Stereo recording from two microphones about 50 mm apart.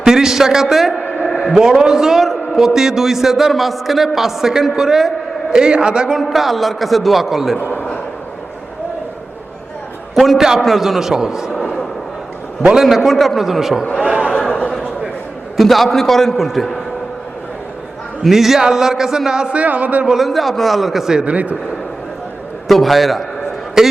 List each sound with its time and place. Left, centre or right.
0.0 s a man's voice: centre
6.3 s a man's voice: centre
10.2 s a man's voice: centre
11.5 s speech: centre
12.8 s a man's voice: centre
14.3 s a sound: centre
15.5 s a man's voice: centre
18.2 s a man's voice: centre
19.6 s a man's voice: right
20.1 s a man's voice: centre
21.2 s a man's voice: right
22.7 s a man's voice: centre